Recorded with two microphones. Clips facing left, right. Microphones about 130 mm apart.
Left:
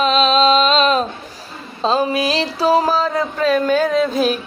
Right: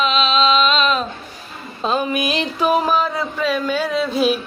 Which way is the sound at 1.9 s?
35° left (ahead or behind).